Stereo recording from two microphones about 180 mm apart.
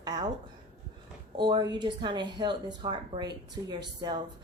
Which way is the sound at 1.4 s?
25° right (ahead or behind).